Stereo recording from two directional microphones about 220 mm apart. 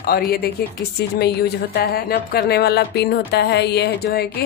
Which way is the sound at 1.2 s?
45° left (ahead or behind).